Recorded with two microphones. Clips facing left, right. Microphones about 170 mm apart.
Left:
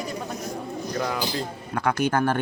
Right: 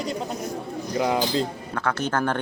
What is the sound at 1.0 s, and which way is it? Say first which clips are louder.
Speech: right 6 dB; 20° right (ahead or behind).